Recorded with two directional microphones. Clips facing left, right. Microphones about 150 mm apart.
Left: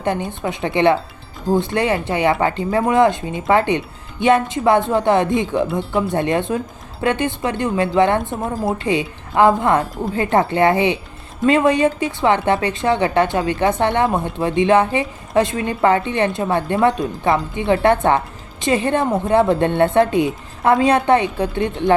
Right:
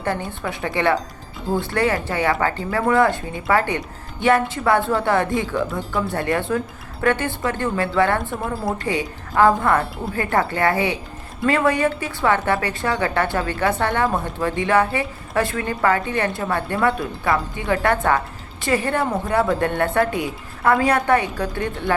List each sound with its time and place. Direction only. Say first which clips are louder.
0.0 s a woman's voice: left 4 dB; 20° left (ahead or behind)